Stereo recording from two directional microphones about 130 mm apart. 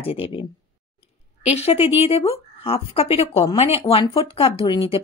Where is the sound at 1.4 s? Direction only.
55° left (ahead or behind).